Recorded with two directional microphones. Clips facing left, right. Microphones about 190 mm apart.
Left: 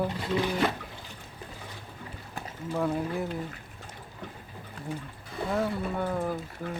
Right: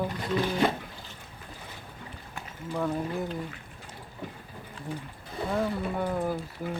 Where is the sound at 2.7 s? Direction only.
5° left (ahead or behind).